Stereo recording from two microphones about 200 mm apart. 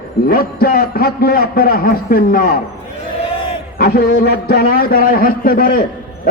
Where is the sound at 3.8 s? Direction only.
50° left (ahead or behind).